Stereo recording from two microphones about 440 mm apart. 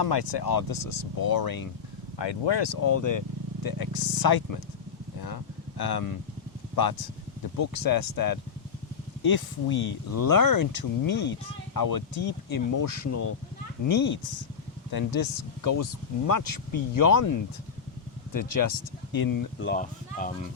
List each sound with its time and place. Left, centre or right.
0.0 s speech: left
2.4 s speech: left
2.8 s speech: left
5.2 s a sound: left
7.6 s speech: left
10.1 s speech: left
11.1 s speech: left
11.7 s speech: left
13.8 s speech: left
14.8 s speech: left
18.3 s speech: left
19.6 s speech: centre